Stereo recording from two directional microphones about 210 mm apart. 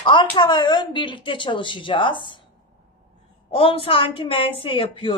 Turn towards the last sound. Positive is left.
turn(degrees=25)  # may be behind; listen again after turning